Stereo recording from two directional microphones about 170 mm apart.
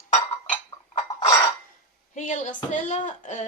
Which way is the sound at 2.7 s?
45° left (ahead or behind).